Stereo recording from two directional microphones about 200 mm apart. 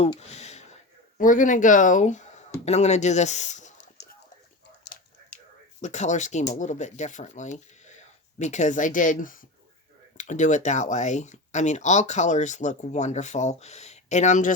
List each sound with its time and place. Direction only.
0.2 s a sound: 35° left (ahead or behind)
1.2 s speech: 40° left (ahead or behind)
4.0 s clip-clop: 60° left (ahead or behind)
5.8 s speech: 35° left (ahead or behind)